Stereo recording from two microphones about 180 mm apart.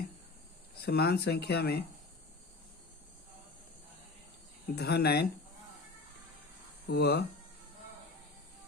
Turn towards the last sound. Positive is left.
turn(degrees=65)  # may be behind; listen again after turning